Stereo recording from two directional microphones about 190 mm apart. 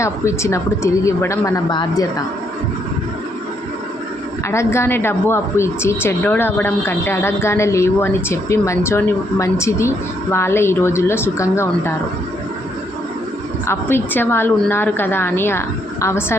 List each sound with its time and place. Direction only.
0.0 s a woman's voice: 15° left (ahead or behind)
4.4 s a woman's voice: 15° left (ahead or behind)
13.7 s a woman's voice: 10° left (ahead or behind)